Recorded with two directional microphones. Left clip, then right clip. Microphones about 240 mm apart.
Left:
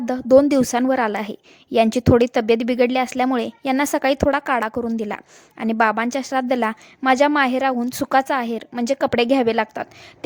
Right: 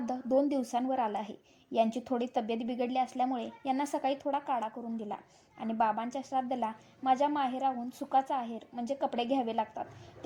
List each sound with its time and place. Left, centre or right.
0.0 s a woman's voice: left